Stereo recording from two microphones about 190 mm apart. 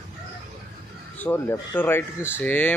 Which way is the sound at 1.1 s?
10° left (ahead or behind).